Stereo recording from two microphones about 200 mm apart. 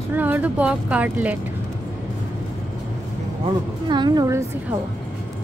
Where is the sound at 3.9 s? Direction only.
20° right (ahead or behind).